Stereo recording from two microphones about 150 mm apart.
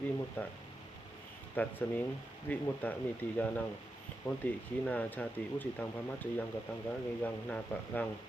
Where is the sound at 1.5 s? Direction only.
10° left (ahead or behind).